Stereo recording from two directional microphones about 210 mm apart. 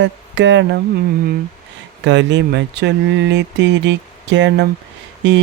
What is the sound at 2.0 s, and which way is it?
Mantra, 55° right (ahead or behind).